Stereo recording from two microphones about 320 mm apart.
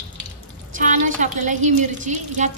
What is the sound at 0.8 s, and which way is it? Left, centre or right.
A woman's voice, right.